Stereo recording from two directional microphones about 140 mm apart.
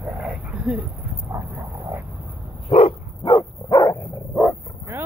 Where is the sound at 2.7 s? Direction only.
45° left (ahead or behind).